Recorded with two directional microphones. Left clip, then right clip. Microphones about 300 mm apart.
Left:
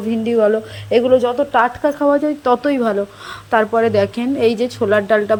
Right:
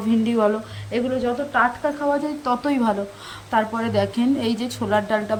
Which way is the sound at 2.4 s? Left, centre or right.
Centre.